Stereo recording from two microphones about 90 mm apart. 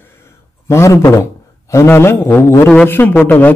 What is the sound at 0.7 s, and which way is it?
A man's voice, 30° left (ahead or behind).